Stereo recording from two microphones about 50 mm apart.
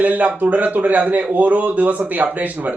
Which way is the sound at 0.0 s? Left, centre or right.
Right.